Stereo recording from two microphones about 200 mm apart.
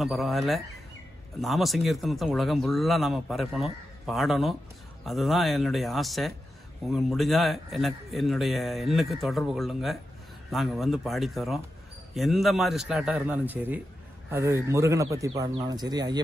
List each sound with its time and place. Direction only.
0.0 s a man's voice: centre (ahead or behind); by 16.2 s 20° right (ahead or behind)